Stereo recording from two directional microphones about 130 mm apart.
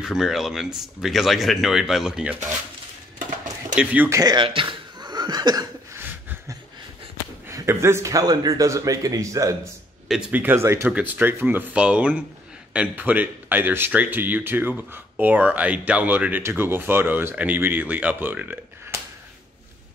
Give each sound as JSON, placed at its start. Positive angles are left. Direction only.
{"t": 0.0, "sound": "speech", "side_deg": -5}
{"t": 3.7, "sound": "speech", "side_deg": -15}
{"t": 4.2, "sound": "a sound", "side_deg": -35}
{"t": 7.4, "sound": "a man's voice", "side_deg": -20}
{"t": 10.0, "sound": "speech", "side_deg": -5}